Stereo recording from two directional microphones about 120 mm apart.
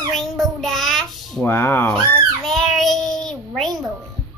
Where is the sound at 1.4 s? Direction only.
15° left (ahead or behind).